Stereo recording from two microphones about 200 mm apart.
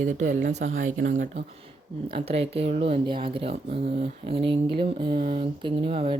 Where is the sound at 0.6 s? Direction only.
80° right.